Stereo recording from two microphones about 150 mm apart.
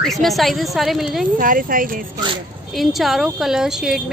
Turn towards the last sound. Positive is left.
turn(degrees=-5)  # may be behind; listen again after turning